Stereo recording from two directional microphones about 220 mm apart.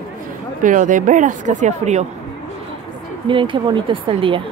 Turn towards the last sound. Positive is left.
turn(degrees=-25)  # may be behind; listen again after turning